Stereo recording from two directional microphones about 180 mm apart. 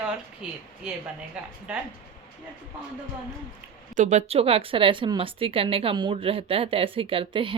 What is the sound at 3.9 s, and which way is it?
Speech, 40° right (ahead or behind).